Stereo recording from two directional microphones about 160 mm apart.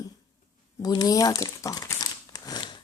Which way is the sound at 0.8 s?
25° left (ahead or behind).